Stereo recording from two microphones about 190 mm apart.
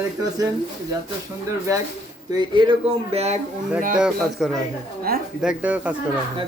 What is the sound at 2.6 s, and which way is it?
Speech, 30° right (ahead or behind).